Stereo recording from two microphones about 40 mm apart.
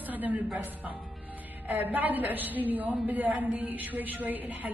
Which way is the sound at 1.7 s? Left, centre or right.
Right.